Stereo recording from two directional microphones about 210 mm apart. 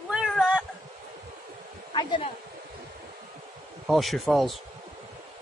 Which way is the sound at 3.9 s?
Centre (ahead or behind).